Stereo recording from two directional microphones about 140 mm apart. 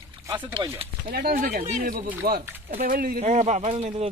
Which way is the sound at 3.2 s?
55° right (ahead or behind).